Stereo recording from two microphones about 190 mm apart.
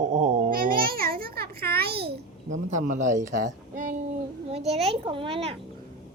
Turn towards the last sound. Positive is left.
turn(degrees=-30)  # may be behind; listen again after turning